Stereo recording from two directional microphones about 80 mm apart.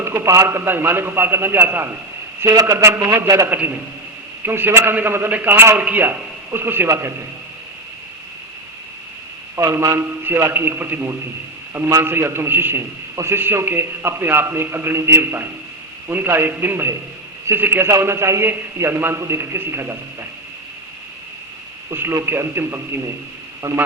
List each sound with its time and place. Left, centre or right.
0.0 s a man's voice: right
2.4 s a man's voice: right
2.7 s a man's voice: right
3.5 s a man's voice: right
9.6 s a man's voice: right
11.7 s a man's voice: right
12.0 s a man's voice: right
21.9 s a man's voice: right
23.6 s a man's voice: right